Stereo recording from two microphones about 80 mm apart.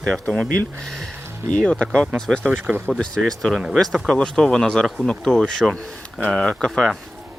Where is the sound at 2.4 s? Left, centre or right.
Right.